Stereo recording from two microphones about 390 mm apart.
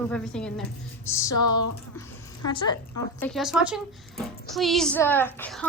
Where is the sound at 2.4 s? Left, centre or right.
Centre.